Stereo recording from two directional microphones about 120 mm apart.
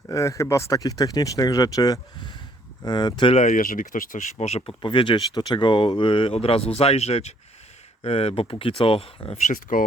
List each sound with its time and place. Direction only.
0.1 s speech: 25° left (ahead or behind)
3.3 s speech: 85° left; by 4.7 s 65° left (ahead or behind)
4.8 s speech: 45° left (ahead or behind)
9.7 s speech: 90° left